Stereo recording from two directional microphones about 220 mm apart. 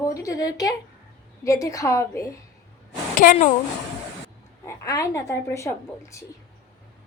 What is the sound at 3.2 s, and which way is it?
Speech, 35° left (ahead or behind).